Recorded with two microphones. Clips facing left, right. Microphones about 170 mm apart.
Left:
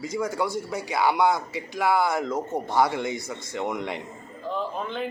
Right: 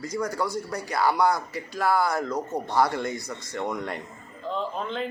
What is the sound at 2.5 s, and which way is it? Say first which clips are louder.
Speech: left 1 dB; centre (ahead or behind).